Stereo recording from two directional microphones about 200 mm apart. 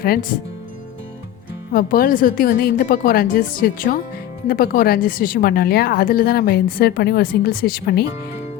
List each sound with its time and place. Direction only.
0.0 s a woman's voice: 45° left (ahead or behind)
1.7 s a woman's voice: 45° left (ahead or behind)